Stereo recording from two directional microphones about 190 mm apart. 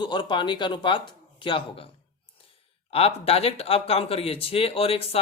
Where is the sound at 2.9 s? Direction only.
30° left (ahead or behind).